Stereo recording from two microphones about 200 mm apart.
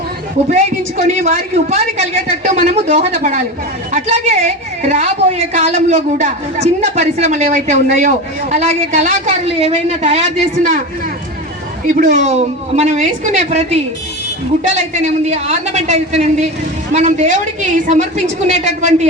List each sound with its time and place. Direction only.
0.9 s a woman's voice: 35° right (ahead or behind)
11.9 s a woman's voice: 40° right (ahead or behind)